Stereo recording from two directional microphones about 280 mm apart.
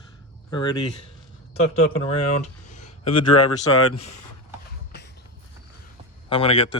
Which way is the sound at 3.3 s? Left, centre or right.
Left.